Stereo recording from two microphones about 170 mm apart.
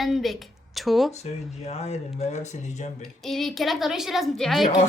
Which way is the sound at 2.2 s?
40° left (ahead or behind).